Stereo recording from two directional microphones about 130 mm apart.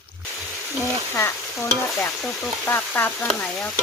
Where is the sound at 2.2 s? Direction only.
5° left (ahead or behind).